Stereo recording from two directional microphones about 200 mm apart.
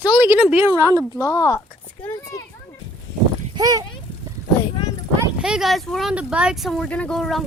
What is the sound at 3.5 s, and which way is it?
Speech, 20° right (ahead or behind).